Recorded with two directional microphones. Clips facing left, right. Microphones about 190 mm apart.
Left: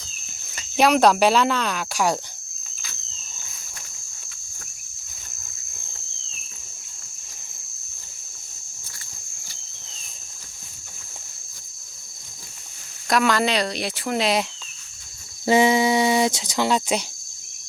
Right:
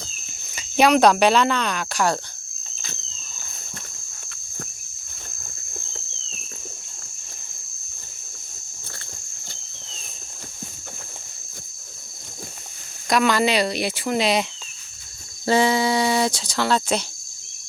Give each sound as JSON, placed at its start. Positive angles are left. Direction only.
{"t": 0.5, "sound": "speech", "side_deg": 0}
{"t": 13.1, "sound": "speech", "side_deg": 0}
{"t": 15.4, "sound": "speech", "side_deg": 15}